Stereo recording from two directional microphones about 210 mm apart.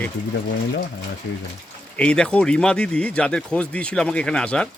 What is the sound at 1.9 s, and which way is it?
Speech, 5° left (ahead or behind).